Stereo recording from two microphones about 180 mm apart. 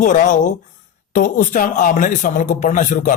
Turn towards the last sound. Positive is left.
turn(degrees=45)  # may be behind; listen again after turning